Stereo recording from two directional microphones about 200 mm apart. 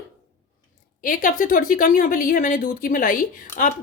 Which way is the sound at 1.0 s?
45° left (ahead or behind).